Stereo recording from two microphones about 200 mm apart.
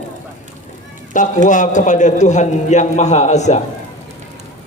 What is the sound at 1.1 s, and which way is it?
A man's voice, 40° left (ahead or behind).